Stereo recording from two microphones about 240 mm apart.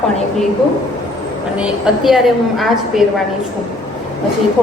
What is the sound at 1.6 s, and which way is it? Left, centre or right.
A woman's voice, centre.